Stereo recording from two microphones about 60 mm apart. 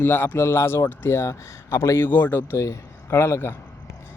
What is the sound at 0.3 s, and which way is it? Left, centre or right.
Speech, left.